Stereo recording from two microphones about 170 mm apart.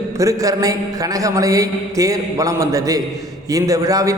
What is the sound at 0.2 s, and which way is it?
A man's voice, 20° right (ahead or behind).